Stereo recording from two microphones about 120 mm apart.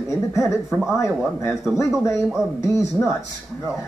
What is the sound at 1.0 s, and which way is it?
Speech, 25° left (ahead or behind).